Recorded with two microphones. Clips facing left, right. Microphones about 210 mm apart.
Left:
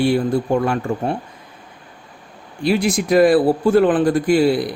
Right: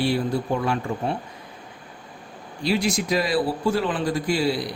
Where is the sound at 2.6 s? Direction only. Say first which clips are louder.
Left 5 dB; 55° left (ahead or behind).